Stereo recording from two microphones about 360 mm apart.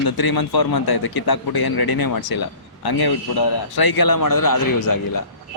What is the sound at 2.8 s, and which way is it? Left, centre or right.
Speech, left.